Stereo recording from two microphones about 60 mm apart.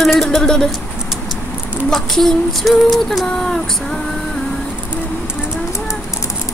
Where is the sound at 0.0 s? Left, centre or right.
Centre.